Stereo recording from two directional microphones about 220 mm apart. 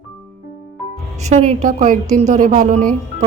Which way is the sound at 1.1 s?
30° right (ahead or behind).